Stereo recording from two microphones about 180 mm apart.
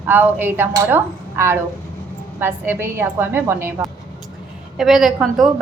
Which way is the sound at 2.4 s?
15° right (ahead or behind).